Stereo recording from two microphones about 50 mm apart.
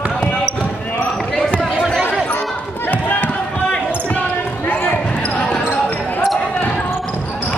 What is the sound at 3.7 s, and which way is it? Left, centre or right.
Basketball bounce, left.